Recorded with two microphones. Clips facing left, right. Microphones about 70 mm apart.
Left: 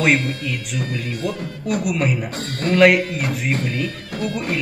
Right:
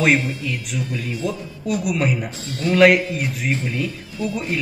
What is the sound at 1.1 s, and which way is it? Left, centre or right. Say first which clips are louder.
Speech: left 1 dB; left.